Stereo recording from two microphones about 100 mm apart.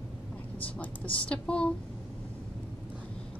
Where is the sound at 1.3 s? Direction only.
10° left (ahead or behind).